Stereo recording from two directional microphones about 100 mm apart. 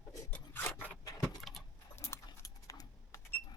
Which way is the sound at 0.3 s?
20° left (ahead or behind).